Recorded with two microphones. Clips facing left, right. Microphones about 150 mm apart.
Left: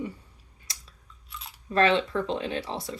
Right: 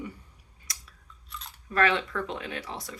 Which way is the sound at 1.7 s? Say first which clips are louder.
Left 3 dB; 30° left (ahead or behind).